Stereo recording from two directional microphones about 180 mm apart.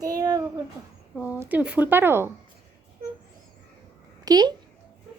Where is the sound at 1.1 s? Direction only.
10° right (ahead or behind).